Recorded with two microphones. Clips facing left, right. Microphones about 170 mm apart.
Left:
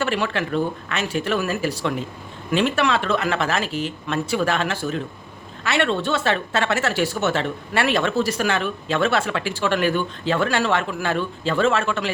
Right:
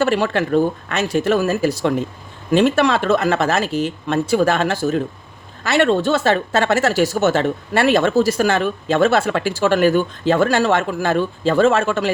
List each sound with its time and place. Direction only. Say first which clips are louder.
0.0 s speech: right 6 dB; 40° right (ahead or behind)